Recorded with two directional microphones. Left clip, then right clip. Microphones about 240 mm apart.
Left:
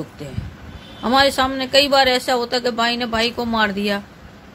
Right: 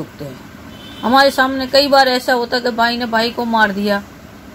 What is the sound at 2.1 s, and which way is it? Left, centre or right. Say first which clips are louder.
A woman's voice: right 3 dB; centre.